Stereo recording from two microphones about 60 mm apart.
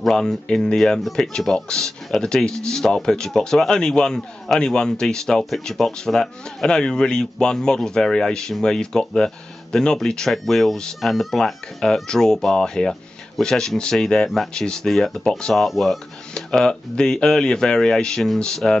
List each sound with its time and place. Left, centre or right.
0.0 s speech: centre